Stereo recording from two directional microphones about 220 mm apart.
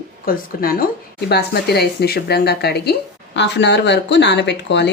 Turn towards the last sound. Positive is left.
turn(degrees=50)  # may be behind; listen again after turning